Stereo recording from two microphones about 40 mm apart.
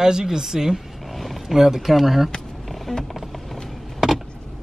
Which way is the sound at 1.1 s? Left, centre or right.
Centre.